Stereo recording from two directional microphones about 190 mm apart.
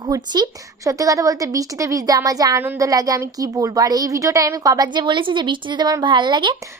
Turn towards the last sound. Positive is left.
turn(degrees=-25)  # may be behind; listen again after turning